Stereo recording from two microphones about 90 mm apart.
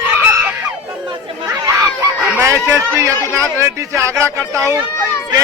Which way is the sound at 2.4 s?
35° right (ahead or behind).